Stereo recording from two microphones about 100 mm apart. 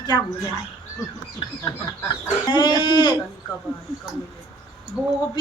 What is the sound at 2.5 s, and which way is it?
Speech, 50° left (ahead or behind).